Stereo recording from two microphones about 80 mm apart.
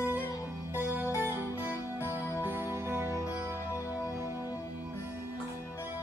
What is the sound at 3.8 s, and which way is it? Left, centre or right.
Music, left.